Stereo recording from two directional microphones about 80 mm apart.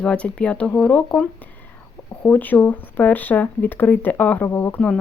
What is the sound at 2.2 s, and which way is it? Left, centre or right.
Speech, left.